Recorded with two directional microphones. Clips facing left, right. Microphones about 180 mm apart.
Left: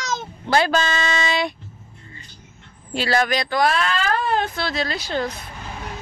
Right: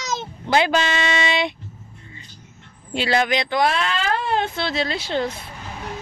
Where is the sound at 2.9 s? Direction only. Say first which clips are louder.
Even; 20° right (ahead or behind).